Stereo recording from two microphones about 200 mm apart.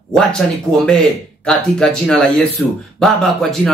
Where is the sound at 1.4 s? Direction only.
5° left (ahead or behind).